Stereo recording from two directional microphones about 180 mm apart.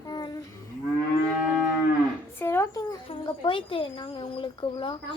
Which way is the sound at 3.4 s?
30° left (ahead or behind).